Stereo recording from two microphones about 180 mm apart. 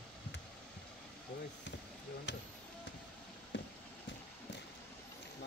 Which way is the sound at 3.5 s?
90° left.